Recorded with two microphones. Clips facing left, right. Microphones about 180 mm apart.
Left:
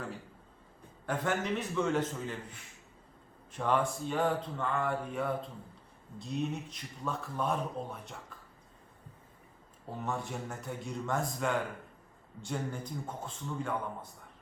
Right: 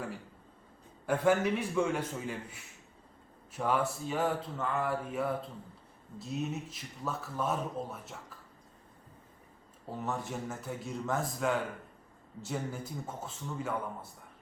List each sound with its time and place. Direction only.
1.0 s a man's voice: 10° right (ahead or behind)
10.0 s speech: centre (ahead or behind)